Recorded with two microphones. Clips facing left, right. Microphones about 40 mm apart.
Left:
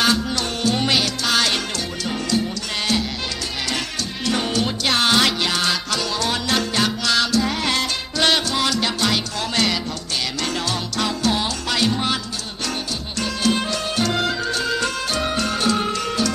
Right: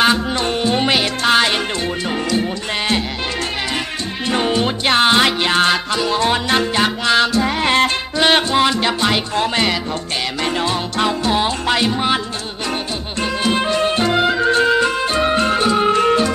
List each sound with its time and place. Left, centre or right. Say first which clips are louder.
0.0 s music: right 4 dB; right
4.3 s music: right 4 dB; right
13.2 s music: right 3 dB; right